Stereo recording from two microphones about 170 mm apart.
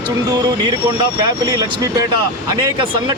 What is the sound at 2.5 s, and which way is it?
Speech, 25° right (ahead or behind).